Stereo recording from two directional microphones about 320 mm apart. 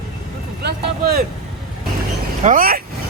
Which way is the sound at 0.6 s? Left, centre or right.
Right.